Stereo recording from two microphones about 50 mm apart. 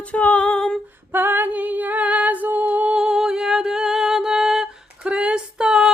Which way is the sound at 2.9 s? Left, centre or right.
Centre.